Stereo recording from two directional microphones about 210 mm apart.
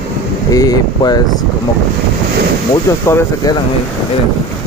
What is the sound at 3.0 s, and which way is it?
Speech, 15° left (ahead or behind).